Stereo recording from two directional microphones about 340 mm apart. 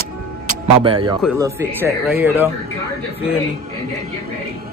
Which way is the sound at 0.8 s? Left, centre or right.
Centre.